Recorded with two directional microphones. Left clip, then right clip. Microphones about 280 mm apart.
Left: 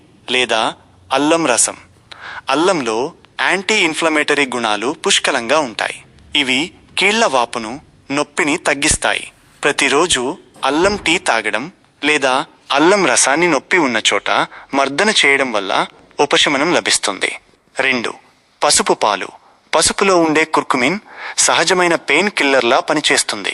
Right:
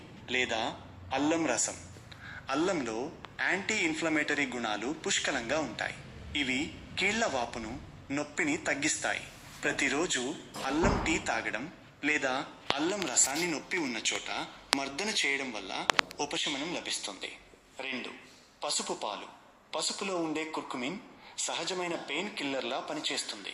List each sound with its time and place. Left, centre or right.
0.3 s a man's voice: left